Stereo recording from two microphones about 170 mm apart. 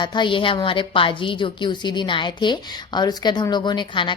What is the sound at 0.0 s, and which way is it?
A woman's voice, 25° left (ahead or behind).